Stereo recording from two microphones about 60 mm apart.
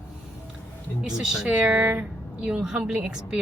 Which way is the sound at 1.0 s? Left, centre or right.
Centre.